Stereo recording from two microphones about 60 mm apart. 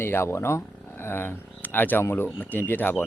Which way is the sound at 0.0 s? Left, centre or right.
Left.